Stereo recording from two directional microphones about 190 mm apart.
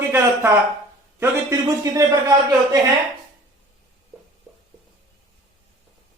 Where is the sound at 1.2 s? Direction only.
15° right (ahead or behind).